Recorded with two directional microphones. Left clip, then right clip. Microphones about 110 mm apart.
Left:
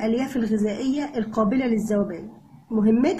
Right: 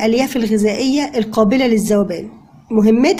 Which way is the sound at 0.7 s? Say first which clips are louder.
Right 9 dB; 15° right (ahead or behind).